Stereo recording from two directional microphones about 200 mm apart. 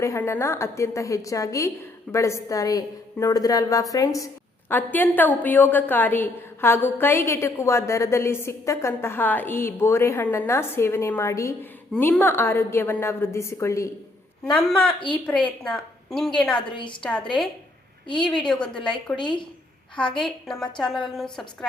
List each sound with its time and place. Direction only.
0.0 s a woman's voice: 15° left (ahead or behind)
16.6 s a woman's voice: 25° left (ahead or behind)
17.0 s a woman's voice: 5° left (ahead or behind)
19.1 s a woman's voice: 25° left (ahead or behind)
20.0 s a woman's voice: 5° left (ahead or behind)